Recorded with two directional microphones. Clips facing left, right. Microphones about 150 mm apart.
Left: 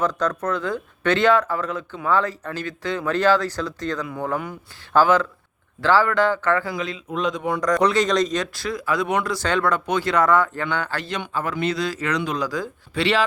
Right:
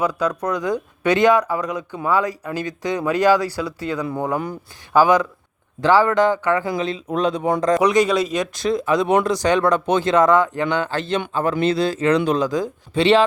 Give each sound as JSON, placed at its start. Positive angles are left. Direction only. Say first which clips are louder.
{"t": 0.0, "sound": "speech", "louder": "right 2 dB", "side_deg": -10}
{"t": 7.8, "sound": "speech", "louder": "right 2 dB", "side_deg": -10}